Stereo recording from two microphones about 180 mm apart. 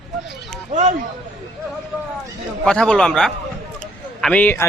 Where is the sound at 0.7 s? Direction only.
40° right (ahead or behind).